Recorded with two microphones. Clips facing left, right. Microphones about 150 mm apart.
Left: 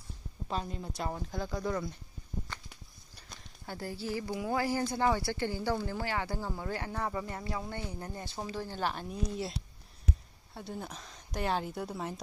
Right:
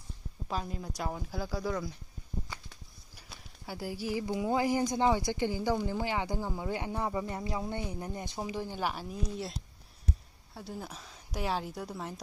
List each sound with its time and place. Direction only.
0.4 s speech: 5° right (ahead or behind)
2.5 s a sound: 10° right (ahead or behind)
3.2 s speech: 10° right (ahead or behind)